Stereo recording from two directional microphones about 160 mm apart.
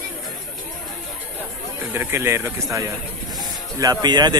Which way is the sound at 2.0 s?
15° right (ahead or behind).